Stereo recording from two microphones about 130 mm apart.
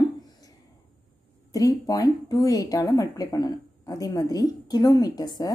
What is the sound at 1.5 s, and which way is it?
Speech, 30° left (ahead or behind).